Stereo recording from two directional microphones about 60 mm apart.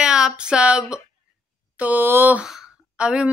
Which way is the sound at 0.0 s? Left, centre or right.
Centre.